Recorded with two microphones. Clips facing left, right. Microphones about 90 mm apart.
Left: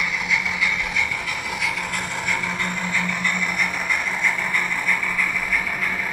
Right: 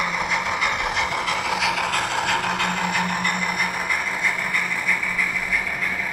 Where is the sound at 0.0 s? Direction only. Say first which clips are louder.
Right 2 dB; 50° right (ahead or behind); by 3.3 s 65° right (ahead or behind).